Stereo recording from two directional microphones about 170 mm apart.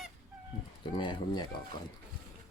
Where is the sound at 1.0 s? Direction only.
25° left (ahead or behind).